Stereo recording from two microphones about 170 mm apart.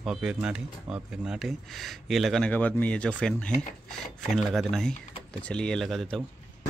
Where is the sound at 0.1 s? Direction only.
5° right (ahead or behind).